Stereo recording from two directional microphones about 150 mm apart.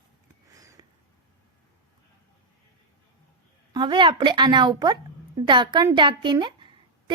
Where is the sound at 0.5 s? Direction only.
20° right (ahead or behind).